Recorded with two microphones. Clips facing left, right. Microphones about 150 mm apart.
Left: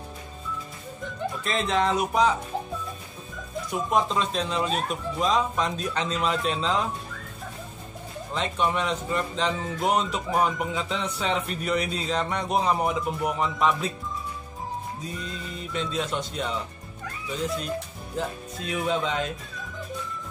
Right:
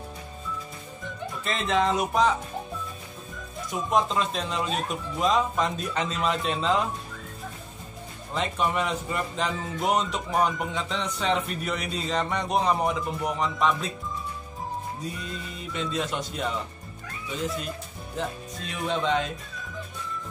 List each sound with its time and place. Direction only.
1.4 s speech: centre (ahead or behind)
3.7 s speech: centre (ahead or behind)
8.4 s speech: 5° right (ahead or behind)
15.7 s speech: centre (ahead or behind)
18.1 s speech: centre (ahead or behind)